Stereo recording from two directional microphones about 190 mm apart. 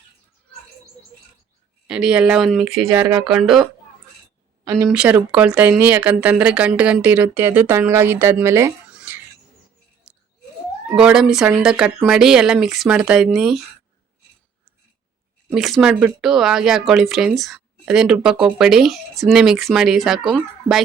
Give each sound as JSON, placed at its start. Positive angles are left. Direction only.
{"t": 1.9, "sound": "speech", "side_deg": -5}
{"t": 2.9, "sound": "speech", "side_deg": -15}
{"t": 3.2, "sound": "speech", "side_deg": 0}
{"t": 4.9, "sound": "speech", "side_deg": -5}
{"t": 10.0, "sound": "a sound", "side_deg": -5}
{"t": 10.9, "sound": "speech", "side_deg": -5}
{"t": 15.5, "sound": "speech", "side_deg": 0}